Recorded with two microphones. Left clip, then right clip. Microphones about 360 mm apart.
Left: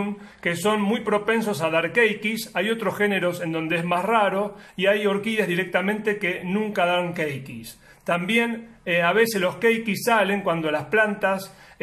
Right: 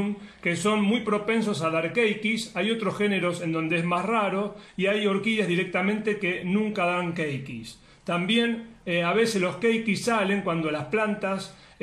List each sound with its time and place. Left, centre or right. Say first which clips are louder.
0.4 s speech: left 2 dB; left